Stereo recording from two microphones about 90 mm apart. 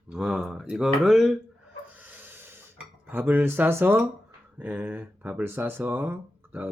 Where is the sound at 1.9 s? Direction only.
20° right (ahead or behind).